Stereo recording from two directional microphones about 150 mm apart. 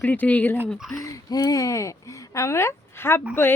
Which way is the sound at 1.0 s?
25° left (ahead or behind).